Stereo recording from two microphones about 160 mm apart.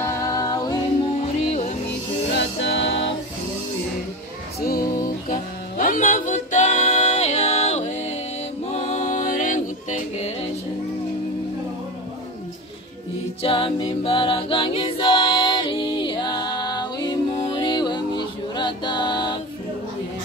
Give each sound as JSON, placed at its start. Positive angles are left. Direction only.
{"t": 0.0, "sound": "music", "side_deg": 20}
{"t": 1.2, "sound": "music", "side_deg": 45}
{"t": 2.8, "sound": "music", "side_deg": 90}
{"t": 4.6, "sound": "music", "side_deg": 65}
{"t": 13.4, "sound": "choir", "side_deg": 35}